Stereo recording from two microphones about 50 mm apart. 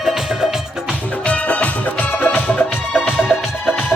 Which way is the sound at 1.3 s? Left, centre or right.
Left.